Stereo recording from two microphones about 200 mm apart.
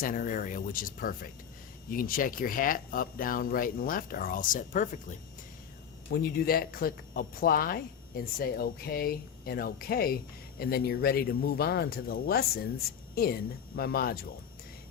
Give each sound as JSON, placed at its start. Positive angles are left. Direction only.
{"t": 0.0, "sound": "speech", "side_deg": 45}
{"t": 6.1, "sound": "speech", "side_deg": 50}